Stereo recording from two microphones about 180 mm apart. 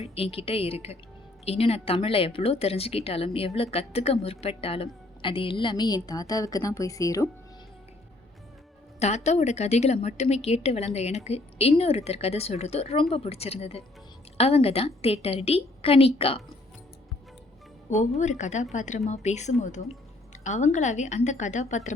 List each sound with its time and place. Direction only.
0.0 s a woman's voice: 35° left (ahead or behind)
9.0 s a woman's voice: 40° left (ahead or behind)
18.2 s a woman's voice: 40° left (ahead or behind)